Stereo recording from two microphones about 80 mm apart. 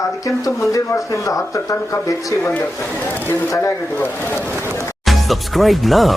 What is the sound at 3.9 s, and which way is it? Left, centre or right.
Speech, left.